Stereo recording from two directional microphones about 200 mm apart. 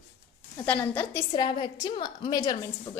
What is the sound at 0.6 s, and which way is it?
Speech, 10° left (ahead or behind).